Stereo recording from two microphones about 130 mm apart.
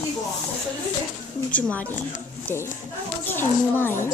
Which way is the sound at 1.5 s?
10° left (ahead or behind).